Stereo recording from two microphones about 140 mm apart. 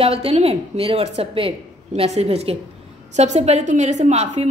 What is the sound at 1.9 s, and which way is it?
A woman's voice, 55° right (ahead or behind).